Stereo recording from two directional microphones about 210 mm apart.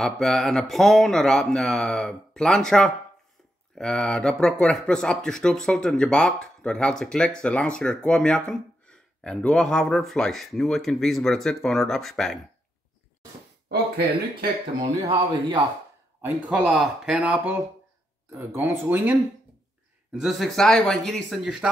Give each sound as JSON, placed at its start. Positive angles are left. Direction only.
{"t": 0.0, "sound": "speech", "side_deg": 0}
{"t": 13.7, "sound": "speech", "side_deg": -45}
{"t": 14.8, "sound": "speech", "side_deg": -25}
{"t": 16.2, "sound": "speech", "side_deg": -10}